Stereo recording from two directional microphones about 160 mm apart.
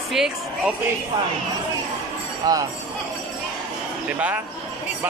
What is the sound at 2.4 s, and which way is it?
Speech, 25° right (ahead or behind).